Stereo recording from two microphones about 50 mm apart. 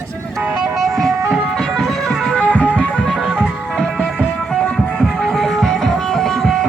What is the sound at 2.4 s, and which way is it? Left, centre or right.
Music, left.